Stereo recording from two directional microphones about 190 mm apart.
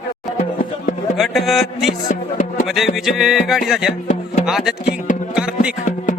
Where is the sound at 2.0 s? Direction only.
45° left (ahead or behind).